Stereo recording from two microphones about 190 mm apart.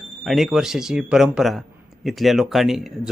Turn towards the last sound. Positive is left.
turn(degrees=0)  # may be behind; listen again after turning